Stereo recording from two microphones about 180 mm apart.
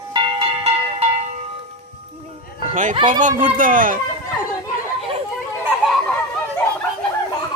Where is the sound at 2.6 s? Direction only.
45° right (ahead or behind).